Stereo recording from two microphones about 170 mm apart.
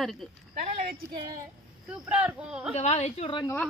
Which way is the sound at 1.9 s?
5° right (ahead or behind).